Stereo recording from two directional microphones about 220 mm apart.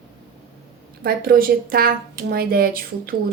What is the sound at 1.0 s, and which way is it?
A woman's voice, 40° right (ahead or behind).